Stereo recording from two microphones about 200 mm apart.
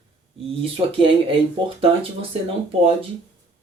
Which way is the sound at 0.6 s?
25° right (ahead or behind).